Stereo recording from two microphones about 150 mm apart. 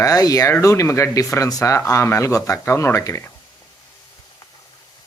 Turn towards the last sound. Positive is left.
turn(degrees=15)  # may be behind; listen again after turning